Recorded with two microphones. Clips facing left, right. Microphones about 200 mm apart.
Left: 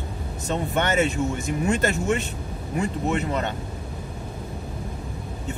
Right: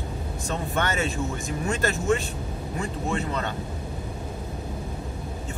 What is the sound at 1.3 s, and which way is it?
Speech, 20° left (ahead or behind).